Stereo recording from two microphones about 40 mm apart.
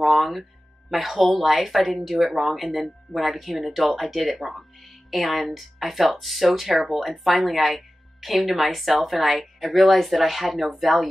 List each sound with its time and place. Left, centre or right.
0.0 s speech: centre